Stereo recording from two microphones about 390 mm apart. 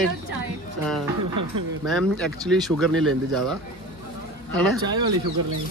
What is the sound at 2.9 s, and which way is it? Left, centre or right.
Speech, right.